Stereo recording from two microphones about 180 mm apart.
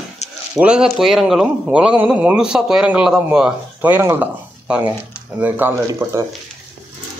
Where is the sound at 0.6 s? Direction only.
5° right (ahead or behind).